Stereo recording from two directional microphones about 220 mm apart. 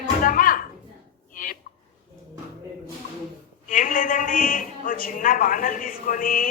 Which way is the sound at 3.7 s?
35° left (ahead or behind).